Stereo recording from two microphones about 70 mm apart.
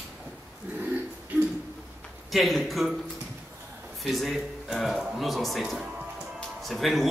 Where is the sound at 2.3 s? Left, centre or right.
Centre.